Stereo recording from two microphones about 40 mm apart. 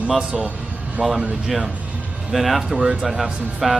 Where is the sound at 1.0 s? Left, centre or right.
Centre.